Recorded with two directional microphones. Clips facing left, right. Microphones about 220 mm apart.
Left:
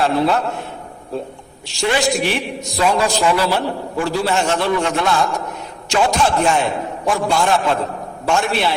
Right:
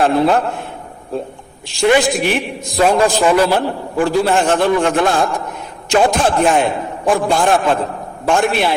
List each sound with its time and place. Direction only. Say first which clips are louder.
0.0 s a man's voice: right 3 dB; 50° right (ahead or behind)